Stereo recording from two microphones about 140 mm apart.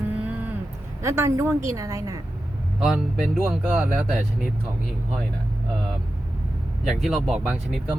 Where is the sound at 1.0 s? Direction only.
20° right (ahead or behind).